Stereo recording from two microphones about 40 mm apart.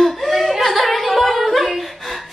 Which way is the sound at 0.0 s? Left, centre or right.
Centre.